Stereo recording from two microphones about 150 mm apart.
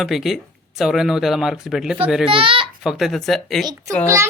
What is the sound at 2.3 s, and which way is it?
Speech, 35° right (ahead or behind).